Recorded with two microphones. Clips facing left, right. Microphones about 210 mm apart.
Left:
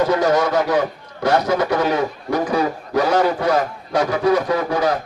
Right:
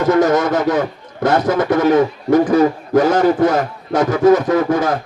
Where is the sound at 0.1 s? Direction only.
45° right (ahead or behind).